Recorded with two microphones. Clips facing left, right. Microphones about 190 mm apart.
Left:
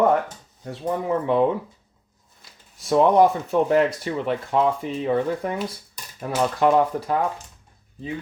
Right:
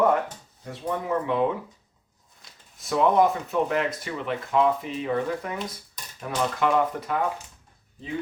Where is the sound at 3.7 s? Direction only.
35° left (ahead or behind).